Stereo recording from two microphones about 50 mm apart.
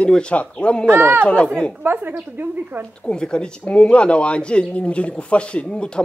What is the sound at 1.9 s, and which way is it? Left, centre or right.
Speech, right.